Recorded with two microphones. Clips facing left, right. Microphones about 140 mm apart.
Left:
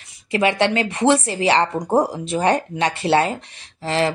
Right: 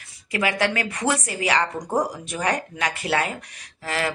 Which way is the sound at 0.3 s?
25° left (ahead or behind).